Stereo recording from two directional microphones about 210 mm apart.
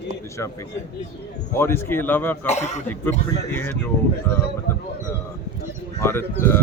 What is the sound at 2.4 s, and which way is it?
Speech, 30° left (ahead or behind).